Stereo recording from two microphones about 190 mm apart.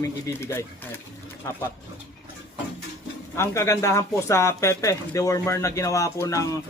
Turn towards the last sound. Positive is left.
turn(degrees=15)  # may be behind; listen again after turning